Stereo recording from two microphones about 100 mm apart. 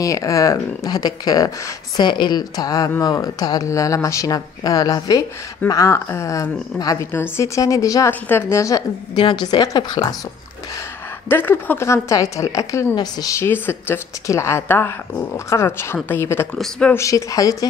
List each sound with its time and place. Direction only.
0.0 s a woman's voice: 35° left (ahead or behind)
5.7 s a woman's voice: 30° left (ahead or behind)
8.1 s a woman's voice: 25° left (ahead or behind)
9.1 s a woman's voice: 50° left (ahead or behind)
11.2 s a woman's voice: 20° left (ahead or behind); by 13.4 s 40° left (ahead or behind)
13.4 s a woman's voice: 20° left (ahead or behind)